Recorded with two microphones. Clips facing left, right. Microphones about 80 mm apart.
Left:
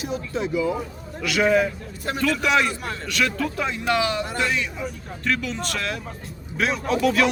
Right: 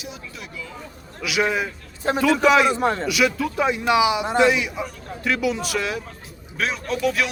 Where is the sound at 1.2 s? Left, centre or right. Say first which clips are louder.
Left 3 dB; centre.